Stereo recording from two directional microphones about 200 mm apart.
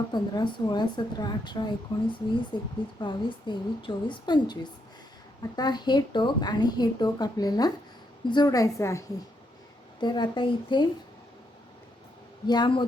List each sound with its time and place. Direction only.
0.1 s a woman's voice: 20° left (ahead or behind)
12.5 s speech: 25° left (ahead or behind)